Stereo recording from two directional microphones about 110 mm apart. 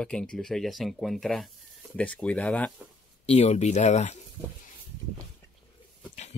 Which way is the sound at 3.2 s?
80° left.